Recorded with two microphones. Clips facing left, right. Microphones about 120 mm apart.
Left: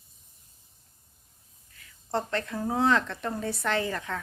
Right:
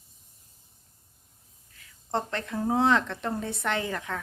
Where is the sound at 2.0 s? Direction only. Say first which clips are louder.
Left 1 dB; 20° right (ahead or behind).